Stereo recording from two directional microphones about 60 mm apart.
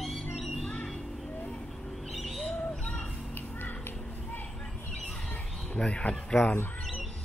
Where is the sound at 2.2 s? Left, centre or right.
Centre.